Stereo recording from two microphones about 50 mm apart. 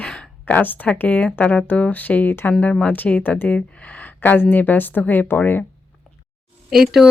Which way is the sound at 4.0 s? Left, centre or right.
Left.